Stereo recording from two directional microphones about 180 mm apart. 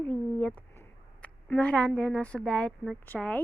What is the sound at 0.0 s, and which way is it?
Speech, 10° left (ahead or behind).